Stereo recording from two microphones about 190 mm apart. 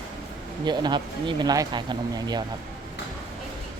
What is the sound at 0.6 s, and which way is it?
Speech, 25° right (ahead or behind).